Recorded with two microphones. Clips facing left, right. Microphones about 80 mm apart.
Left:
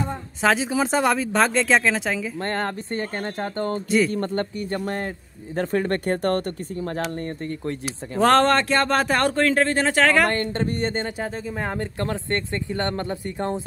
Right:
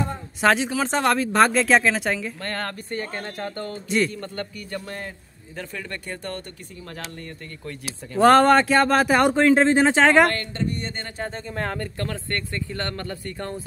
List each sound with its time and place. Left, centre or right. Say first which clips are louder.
0.4 s speech: even; centre
2.4 s speech: left 4 dB; left
8.2 s speech: right 3 dB; centre
10.2 s speech: even; left
11.1 s speech: left 1 dB; centre